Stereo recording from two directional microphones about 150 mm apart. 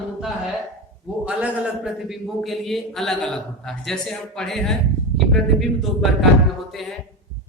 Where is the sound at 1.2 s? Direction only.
10° right (ahead or behind).